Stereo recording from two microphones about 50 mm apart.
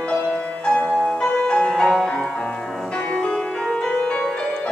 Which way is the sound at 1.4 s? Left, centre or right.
Centre.